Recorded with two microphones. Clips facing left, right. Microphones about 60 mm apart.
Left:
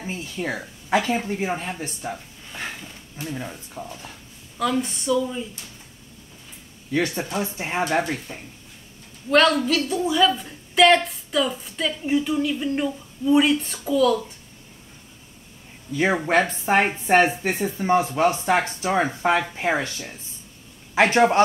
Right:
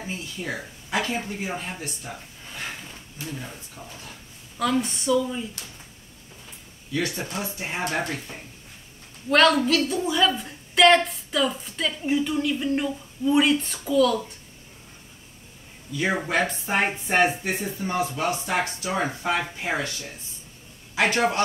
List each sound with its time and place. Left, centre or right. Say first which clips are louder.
0.0 s speech: left 4 dB; left
3.2 s speech: left 4 dB; left
4.6 s a woman's voice: left 1 dB; centre
6.9 s speech: left 4 dB; left
9.3 s a woman's voice: left 1 dB; centre
16.0 s speech: left 4 dB; left
16.8 s a man's voice: left 1 dB; left